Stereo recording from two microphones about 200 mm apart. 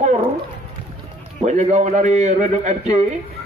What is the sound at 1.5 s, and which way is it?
Speech, 35° right (ahead or behind).